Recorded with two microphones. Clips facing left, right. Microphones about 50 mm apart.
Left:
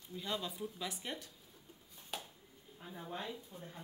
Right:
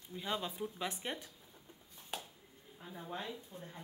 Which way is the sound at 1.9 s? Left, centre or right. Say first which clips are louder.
Right 1 dB; right.